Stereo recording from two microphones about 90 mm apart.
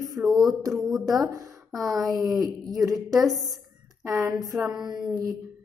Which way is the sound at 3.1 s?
Centre (ahead or behind).